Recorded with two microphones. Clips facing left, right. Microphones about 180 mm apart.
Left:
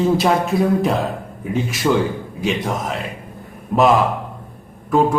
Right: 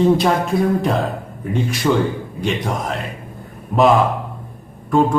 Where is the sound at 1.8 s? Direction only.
5° left (ahead or behind).